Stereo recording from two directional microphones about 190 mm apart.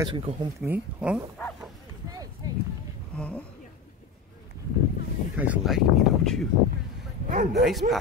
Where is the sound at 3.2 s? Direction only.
5° left (ahead or behind).